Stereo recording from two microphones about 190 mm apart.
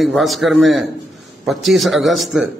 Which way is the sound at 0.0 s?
Centre (ahead or behind).